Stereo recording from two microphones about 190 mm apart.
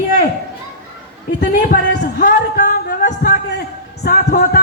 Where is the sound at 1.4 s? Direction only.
50° left (ahead or behind).